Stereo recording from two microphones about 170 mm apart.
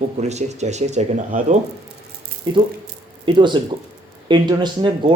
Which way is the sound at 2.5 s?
25° right (ahead or behind).